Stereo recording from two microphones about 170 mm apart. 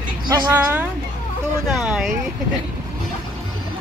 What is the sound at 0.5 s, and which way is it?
Speech, 10° right (ahead or behind).